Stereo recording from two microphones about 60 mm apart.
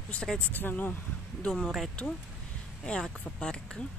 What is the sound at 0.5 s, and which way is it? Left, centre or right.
Speech, left.